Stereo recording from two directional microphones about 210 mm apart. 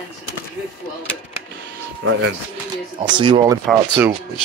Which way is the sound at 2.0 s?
70° right (ahead or behind).